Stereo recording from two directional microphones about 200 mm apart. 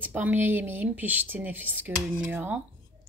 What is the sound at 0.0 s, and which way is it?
Speech, 10° right (ahead or behind).